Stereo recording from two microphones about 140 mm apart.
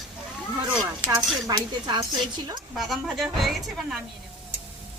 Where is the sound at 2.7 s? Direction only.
Centre (ahead or behind).